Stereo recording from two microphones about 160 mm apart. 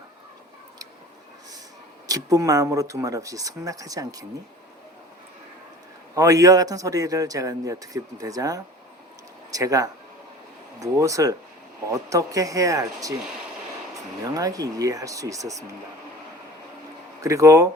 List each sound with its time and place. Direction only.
2.0 s speech: 20° right (ahead or behind)
6.1 s speech: 20° right (ahead or behind)
14.3 s speech: 20° right (ahead or behind)
17.2 s speech: 20° right (ahead or behind)